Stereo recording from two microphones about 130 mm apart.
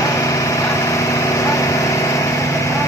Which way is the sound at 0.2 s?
25° left (ahead or behind).